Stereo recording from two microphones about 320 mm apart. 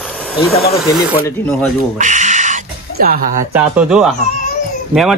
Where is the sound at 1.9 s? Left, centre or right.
Right.